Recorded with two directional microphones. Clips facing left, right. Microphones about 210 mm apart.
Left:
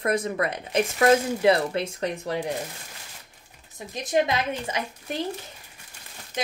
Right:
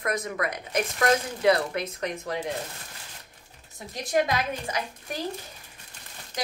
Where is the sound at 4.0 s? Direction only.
20° left (ahead or behind).